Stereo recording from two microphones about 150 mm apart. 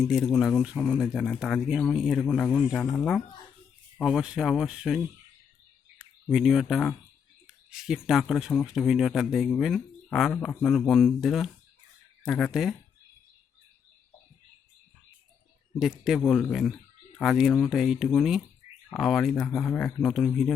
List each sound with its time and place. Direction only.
0.0 s speech: centre (ahead or behind)
6.3 s speech: centre (ahead or behind)
15.8 s speech: 5° right (ahead or behind)